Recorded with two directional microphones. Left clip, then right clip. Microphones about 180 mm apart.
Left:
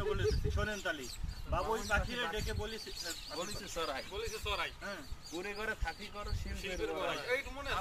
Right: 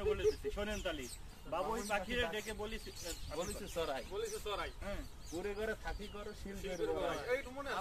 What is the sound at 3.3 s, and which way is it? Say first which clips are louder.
Speech: right 1 dB; 40° right (ahead or behind).